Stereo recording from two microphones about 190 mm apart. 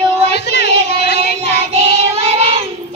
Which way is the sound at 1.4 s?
35° right (ahead or behind).